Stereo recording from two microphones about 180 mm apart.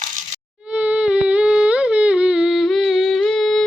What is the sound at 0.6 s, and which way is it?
Humming, 5° right (ahead or behind).